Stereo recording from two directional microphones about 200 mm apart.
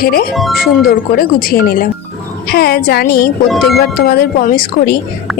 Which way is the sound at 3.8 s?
50° left (ahead or behind).